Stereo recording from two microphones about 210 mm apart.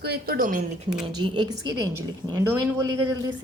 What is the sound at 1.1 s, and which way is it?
A woman's voice, 20° right (ahead or behind).